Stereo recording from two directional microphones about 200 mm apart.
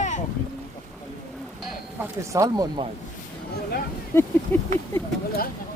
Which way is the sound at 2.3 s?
15° right (ahead or behind).